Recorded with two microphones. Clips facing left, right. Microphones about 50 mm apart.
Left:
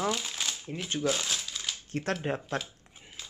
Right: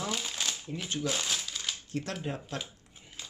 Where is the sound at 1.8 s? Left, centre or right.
Left.